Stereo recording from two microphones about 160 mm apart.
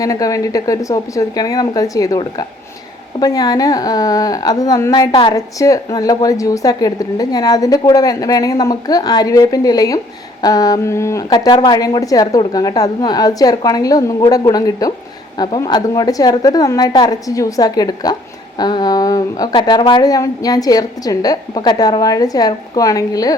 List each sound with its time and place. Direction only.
0.0 s a woman's voice: 20° left (ahead or behind)